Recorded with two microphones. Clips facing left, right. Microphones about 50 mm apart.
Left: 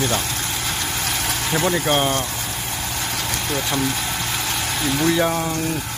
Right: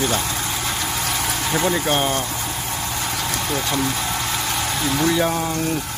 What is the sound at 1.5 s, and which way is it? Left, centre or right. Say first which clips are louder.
Speech: left 1 dB; centre.